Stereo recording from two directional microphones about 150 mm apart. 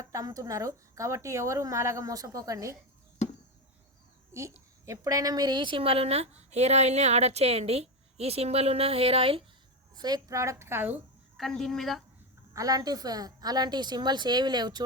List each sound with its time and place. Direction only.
0.0 s speech: 20° right (ahead or behind)
4.3 s a woman's voice: 20° right (ahead or behind); by 9.4 s 40° right (ahead or behind)
9.9 s speech: 25° right (ahead or behind)
11.3 s a woman's voice: centre (ahead or behind)
12.5 s speech: 25° right (ahead or behind)